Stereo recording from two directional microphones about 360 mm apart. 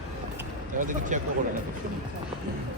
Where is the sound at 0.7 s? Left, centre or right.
Right.